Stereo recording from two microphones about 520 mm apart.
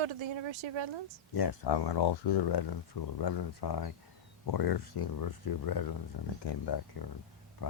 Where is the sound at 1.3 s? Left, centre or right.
Left.